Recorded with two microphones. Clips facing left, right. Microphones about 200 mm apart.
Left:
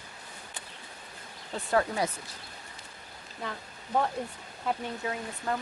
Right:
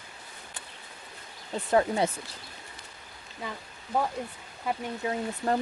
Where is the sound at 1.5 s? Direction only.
20° right (ahead or behind).